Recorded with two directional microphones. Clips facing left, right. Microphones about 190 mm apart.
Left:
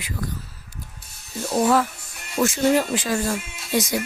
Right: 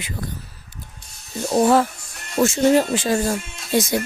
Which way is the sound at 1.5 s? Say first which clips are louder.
Right 3 dB; 25° right (ahead or behind).